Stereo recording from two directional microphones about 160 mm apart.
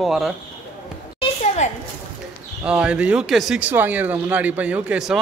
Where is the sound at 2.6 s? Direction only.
5° right (ahead or behind).